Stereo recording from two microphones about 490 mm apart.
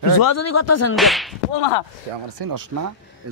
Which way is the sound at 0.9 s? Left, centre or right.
Centre.